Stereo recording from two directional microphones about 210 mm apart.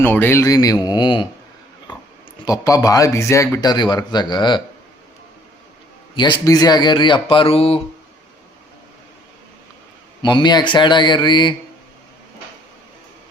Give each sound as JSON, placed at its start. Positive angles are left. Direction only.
{"t": 0.0, "sound": "speech", "side_deg": 10}
{"t": 2.4, "sound": "speech", "side_deg": 15}
{"t": 6.1, "sound": "speech", "side_deg": 20}
{"t": 10.2, "sound": "speech", "side_deg": 20}